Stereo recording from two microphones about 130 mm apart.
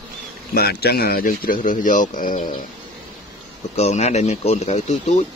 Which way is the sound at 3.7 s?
60° left (ahead or behind).